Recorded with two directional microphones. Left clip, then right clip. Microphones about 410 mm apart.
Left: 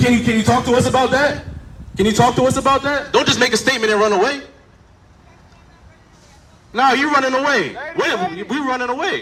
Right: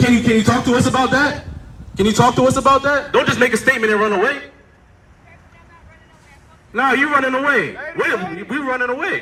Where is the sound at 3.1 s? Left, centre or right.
Centre.